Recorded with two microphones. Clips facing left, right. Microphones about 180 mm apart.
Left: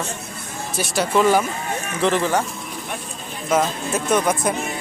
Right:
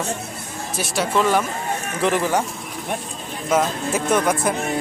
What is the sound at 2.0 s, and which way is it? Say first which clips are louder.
Speech: left 1 dB; 10° right (ahead or behind).